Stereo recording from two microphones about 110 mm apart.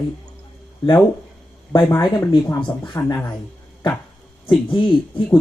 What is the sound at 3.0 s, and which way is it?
Speech, 25° left (ahead or behind).